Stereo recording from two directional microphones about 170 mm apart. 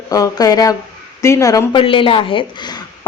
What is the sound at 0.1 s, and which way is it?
A woman's voice, 20° left (ahead or behind).